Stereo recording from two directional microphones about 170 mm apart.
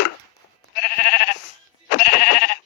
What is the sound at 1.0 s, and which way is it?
Sheep, 60° left (ahead or behind).